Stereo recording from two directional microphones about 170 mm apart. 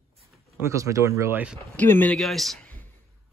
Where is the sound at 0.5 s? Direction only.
15° right (ahead or behind).